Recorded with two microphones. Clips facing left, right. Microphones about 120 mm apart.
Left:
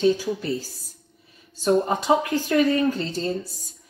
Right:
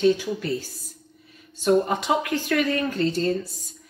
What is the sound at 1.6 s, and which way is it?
A woman's voice, 35° left (ahead or behind).